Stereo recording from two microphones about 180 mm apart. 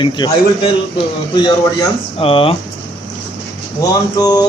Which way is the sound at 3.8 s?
20° left (ahead or behind).